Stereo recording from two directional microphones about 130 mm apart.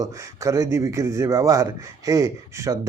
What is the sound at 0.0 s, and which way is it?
A man's voice, 25° right (ahead or behind).